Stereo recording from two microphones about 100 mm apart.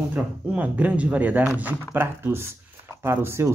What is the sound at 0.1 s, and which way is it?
Speech, 15° right (ahead or behind).